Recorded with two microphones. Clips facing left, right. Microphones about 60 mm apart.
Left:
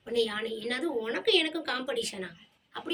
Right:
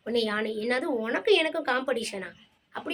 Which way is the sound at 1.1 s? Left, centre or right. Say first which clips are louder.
Right 5 dB; right.